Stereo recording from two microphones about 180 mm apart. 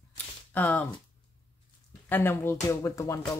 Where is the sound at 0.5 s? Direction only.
10° left (ahead or behind).